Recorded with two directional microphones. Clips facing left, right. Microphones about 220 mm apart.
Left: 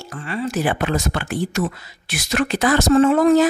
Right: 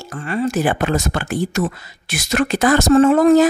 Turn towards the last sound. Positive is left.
turn(degrees=-45)  # may be behind; listen again after turning